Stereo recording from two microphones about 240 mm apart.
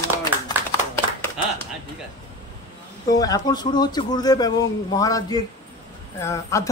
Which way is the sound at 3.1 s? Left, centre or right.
Centre.